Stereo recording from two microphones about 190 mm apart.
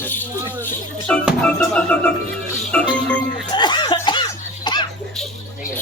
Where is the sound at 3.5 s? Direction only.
25° left (ahead or behind).